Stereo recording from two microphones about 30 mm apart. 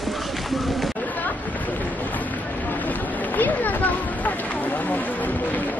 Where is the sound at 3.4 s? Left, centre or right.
Left.